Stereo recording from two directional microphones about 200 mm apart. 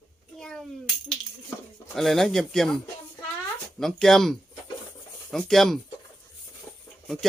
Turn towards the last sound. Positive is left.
turn(degrees=0)  # may be behind; listen again after turning